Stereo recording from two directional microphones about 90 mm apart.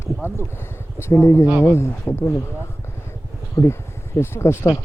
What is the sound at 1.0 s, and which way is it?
Speech, 30° left (ahead or behind).